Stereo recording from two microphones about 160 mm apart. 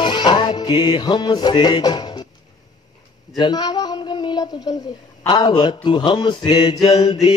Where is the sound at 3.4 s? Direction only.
25° left (ahead or behind).